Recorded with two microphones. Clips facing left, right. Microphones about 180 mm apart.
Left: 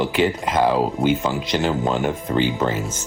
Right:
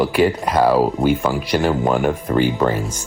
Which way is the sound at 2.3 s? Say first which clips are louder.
Right 3 dB; 50° right (ahead or behind).